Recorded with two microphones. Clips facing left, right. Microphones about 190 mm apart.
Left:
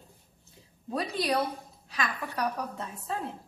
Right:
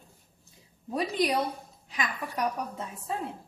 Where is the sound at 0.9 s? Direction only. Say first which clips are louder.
Right 2 dB; 15° right (ahead or behind).